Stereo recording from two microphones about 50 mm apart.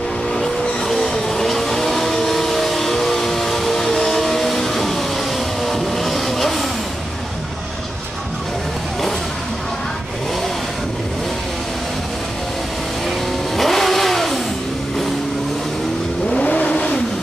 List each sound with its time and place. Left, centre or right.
0.3 s vehicle: centre
13.6 s vehicle: centre
16.3 s vehicle: left